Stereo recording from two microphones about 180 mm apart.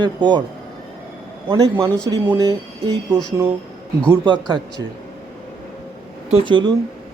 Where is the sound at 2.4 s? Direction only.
20° right (ahead or behind).